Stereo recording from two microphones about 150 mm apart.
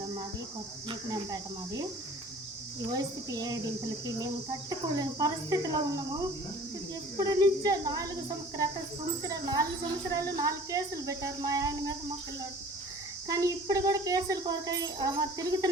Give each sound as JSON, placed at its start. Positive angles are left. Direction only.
{"t": 0.9, "sound": "speech", "side_deg": -25}
{"t": 2.9, "sound": "a child's voice", "side_deg": -25}
{"t": 4.7, "sound": "a child's voice", "side_deg": -25}
{"t": 9.2, "sound": "a child's voice", "side_deg": -25}
{"t": 13.2, "sound": "a child's voice", "side_deg": -25}